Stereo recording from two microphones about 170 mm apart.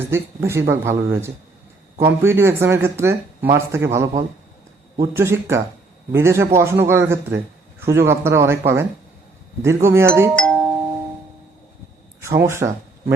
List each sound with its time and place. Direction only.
0.0 s speech: 15° right (ahead or behind)
10.3 s doorbell: 5° left (ahead or behind)
12.2 s speech: 15° right (ahead or behind)